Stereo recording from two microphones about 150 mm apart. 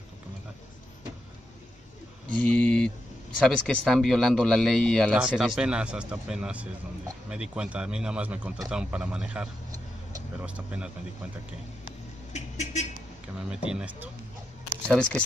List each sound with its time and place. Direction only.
2.3 s speech: 10° left (ahead or behind); by 10.9 s 10° right (ahead or behind)
12.3 s a sound: 50° left (ahead or behind)
13.5 s speech: 5° right (ahead or behind)
14.9 s speech: 5° left (ahead or behind)